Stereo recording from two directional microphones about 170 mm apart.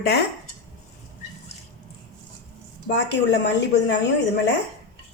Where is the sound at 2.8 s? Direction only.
90° left.